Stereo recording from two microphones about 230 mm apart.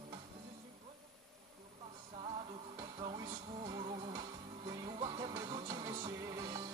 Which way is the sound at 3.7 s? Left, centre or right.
Right.